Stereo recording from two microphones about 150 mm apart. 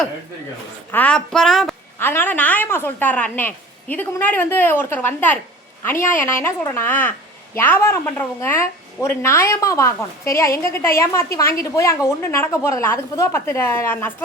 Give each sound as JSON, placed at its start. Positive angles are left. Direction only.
{"t": 0.9, "sound": "speech", "side_deg": 10}
{"t": 2.0, "sound": "a woman's voice", "side_deg": 15}